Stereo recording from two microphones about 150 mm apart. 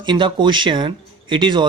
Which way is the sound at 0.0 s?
30° right (ahead or behind).